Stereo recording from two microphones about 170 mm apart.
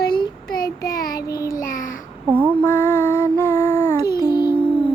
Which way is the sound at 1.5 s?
55° left (ahead or behind).